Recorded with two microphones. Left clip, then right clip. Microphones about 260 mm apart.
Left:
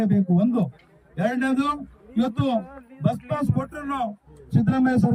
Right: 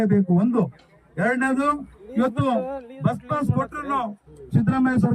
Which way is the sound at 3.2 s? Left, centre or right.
Centre.